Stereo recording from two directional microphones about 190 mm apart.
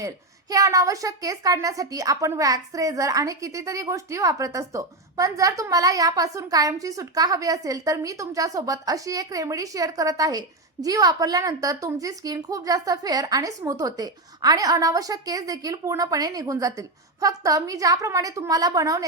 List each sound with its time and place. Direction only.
0.5 s a woman's voice: 15° right (ahead or behind)